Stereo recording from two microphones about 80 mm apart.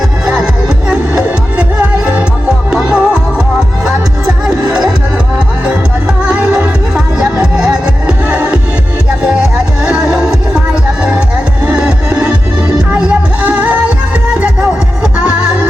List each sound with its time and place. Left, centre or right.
0.9 s music: centre
6.2 s music: centre
9.8 s music: centre
11.6 s music: centre